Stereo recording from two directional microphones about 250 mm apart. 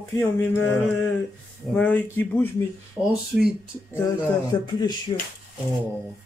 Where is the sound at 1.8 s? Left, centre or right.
Centre.